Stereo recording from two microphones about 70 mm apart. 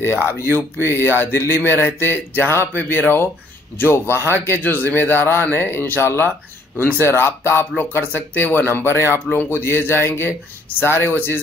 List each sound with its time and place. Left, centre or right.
0.0 s speech: left